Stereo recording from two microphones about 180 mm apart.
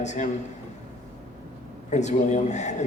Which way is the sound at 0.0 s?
40° left (ahead or behind).